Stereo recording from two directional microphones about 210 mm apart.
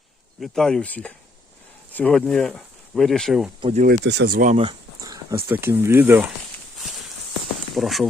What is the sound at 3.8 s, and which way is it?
Speech, 55° right (ahead or behind).